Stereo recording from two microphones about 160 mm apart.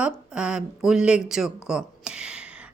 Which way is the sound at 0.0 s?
5° right (ahead or behind).